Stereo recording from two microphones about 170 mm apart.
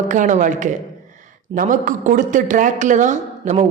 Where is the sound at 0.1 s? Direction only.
50° right (ahead or behind).